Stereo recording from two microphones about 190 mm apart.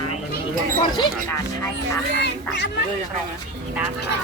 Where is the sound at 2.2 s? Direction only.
65° left (ahead or behind).